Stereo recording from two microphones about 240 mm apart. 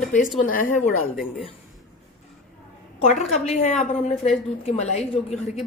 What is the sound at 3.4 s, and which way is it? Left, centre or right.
A woman's voice, left.